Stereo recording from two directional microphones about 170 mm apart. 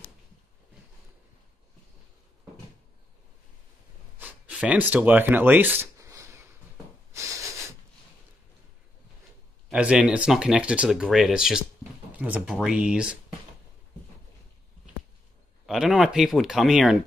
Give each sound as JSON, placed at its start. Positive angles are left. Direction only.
{"t": 4.2, "sound": "a sound", "side_deg": -10}
{"t": 7.2, "sound": "snort", "side_deg": -20}
{"t": 9.7, "sound": "speech", "side_deg": -5}
{"t": 15.6, "sound": "speech", "side_deg": 0}